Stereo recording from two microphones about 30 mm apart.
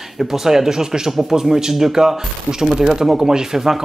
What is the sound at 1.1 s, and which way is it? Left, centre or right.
Speech, centre.